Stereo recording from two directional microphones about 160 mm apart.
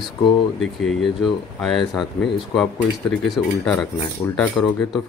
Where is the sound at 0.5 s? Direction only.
Centre (ahead or behind).